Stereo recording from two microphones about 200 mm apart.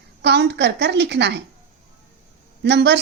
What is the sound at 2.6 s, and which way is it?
Speech, 60° right (ahead or behind).